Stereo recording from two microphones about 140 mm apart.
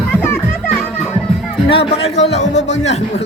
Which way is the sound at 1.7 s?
40° left (ahead or behind).